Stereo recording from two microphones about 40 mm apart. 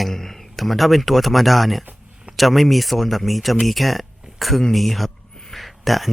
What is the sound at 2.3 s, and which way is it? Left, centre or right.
Speech, centre.